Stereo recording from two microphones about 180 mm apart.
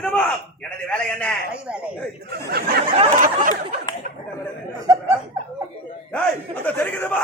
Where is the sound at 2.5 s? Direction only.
60° right (ahead or behind).